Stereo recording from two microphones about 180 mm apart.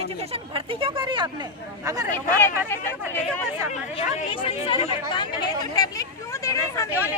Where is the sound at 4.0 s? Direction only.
30° left (ahead or behind).